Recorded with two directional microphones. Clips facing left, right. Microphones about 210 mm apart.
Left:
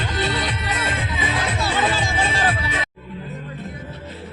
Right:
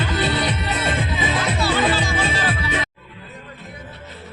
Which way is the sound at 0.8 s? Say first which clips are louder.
Right 5 dB; 30° right (ahead or behind).